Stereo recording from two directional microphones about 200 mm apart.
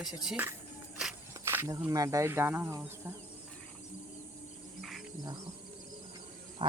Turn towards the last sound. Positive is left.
turn(degrees=-25)  # may be behind; listen again after turning